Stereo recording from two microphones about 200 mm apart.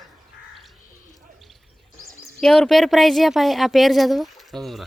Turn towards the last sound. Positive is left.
turn(degrees=0)  # may be behind; listen again after turning